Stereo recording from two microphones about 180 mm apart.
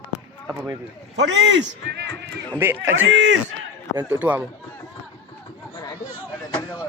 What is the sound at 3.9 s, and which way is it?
Speech, 10° right (ahead or behind).